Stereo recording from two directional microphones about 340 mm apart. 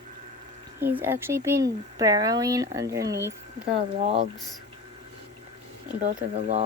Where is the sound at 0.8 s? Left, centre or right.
Centre.